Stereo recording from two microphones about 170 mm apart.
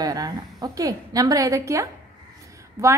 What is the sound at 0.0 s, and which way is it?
A woman's voice, 20° right (ahead or behind).